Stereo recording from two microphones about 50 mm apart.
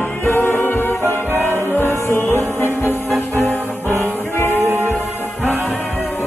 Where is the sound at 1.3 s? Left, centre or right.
Right.